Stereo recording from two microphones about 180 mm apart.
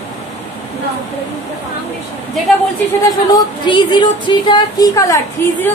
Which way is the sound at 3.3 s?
25° left (ahead or behind).